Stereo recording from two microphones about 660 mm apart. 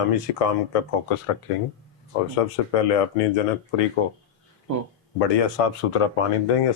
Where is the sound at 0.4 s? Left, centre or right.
Left.